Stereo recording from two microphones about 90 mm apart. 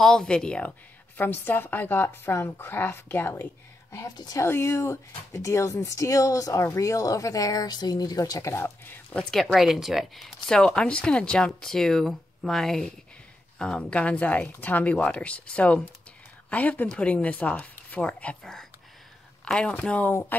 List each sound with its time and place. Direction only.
0.0 s speech: 5° left (ahead or behind)
1.1 s a woman's voice: 20° left (ahead or behind)
9.1 s speech: 5° left (ahead or behind)